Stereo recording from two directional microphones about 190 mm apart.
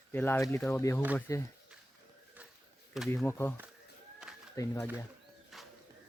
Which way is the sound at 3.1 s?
15° left (ahead or behind).